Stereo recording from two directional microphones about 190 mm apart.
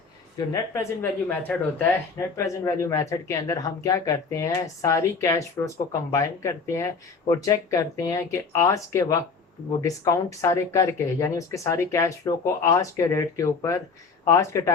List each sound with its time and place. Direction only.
0.3 s speech: 15° left (ahead or behind)